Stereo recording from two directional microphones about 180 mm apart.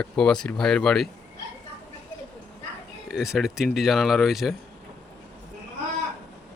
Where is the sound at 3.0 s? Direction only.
5° right (ahead or behind).